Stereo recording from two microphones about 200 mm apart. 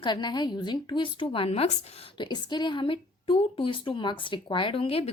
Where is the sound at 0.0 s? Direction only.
20° left (ahead or behind).